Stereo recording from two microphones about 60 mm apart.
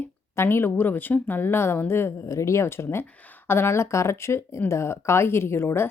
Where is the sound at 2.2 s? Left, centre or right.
Left.